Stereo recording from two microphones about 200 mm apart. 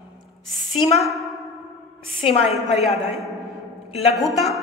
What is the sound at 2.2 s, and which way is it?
Speech, 30° left (ahead or behind).